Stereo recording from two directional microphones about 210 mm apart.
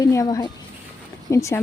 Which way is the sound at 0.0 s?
15° left (ahead or behind).